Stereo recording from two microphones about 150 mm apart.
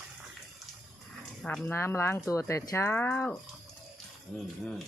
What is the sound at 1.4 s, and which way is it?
Speech, 5° left (ahead or behind).